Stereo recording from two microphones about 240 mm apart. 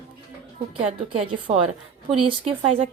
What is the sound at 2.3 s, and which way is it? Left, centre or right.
Speech, right.